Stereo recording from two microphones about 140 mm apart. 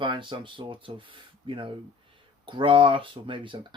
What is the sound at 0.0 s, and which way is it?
Speech, 35° right (ahead or behind).